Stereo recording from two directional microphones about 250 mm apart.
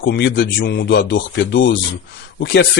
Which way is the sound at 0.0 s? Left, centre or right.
Left.